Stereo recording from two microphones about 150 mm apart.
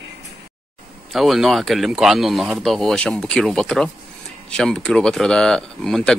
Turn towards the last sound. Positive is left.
turn(degrees=5)  # may be behind; listen again after turning